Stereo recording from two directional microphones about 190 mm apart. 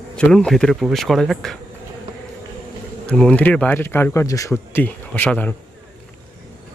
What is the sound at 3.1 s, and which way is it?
Speech, 5° left (ahead or behind).